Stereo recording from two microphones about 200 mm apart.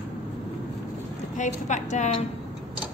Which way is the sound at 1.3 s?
40° left (ahead or behind).